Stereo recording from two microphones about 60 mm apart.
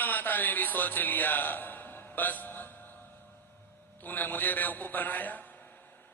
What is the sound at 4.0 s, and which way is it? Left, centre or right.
A man's voice, left.